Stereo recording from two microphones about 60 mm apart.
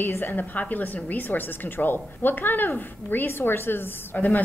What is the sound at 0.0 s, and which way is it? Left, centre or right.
A woman's voice, left.